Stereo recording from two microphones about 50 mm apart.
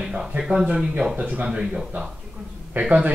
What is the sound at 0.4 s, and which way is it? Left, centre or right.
Speech, centre.